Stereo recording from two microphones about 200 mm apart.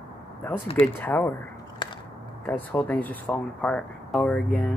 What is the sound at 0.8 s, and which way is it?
Speech, 10° left (ahead or behind).